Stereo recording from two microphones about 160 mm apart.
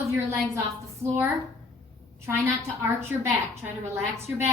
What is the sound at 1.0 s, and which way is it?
Speech, 15° right (ahead or behind).